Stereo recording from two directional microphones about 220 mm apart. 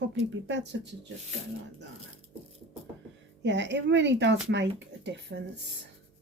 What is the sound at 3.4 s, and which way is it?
Speech, 55° right (ahead or behind).